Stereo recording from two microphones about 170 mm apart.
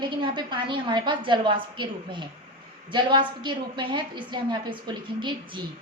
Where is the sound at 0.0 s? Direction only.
30° right (ahead or behind).